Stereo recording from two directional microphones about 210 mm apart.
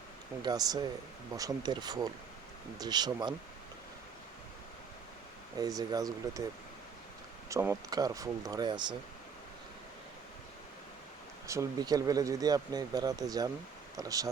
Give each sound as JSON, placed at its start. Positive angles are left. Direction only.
{"t": 0.4, "sound": "speech", "side_deg": -20}
{"t": 5.5, "sound": "speech", "side_deg": -15}
{"t": 7.5, "sound": "speech", "side_deg": -15}
{"t": 11.4, "sound": "speech", "side_deg": -15}